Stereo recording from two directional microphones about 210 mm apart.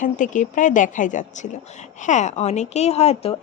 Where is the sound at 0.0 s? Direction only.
35° left (ahead or behind).